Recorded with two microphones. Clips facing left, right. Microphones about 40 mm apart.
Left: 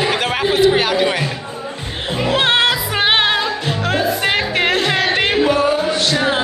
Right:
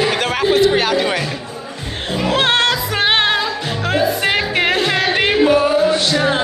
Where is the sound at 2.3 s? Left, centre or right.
Centre.